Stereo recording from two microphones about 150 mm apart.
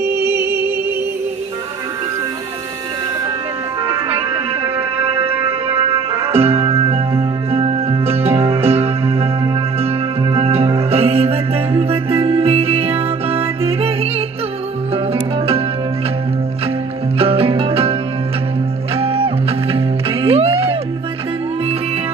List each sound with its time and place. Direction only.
0.0 s music: 15° right (ahead or behind)
5.9 s music: 40° right (ahead or behind)
17.2 s music: 40° right (ahead or behind)
18.9 s music: 40° right (ahead or behind)